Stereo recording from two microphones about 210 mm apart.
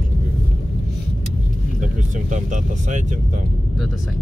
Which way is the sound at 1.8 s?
35° right (ahead or behind).